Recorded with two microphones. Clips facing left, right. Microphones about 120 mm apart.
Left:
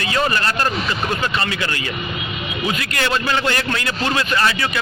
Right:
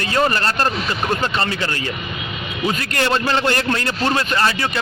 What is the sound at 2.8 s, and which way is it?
Speech, 40° right (ahead or behind).